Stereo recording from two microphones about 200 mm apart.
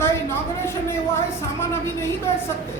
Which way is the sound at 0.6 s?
15° left (ahead or behind).